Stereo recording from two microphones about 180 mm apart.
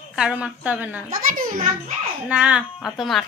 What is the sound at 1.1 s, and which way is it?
Speech, 50° right (ahead or behind).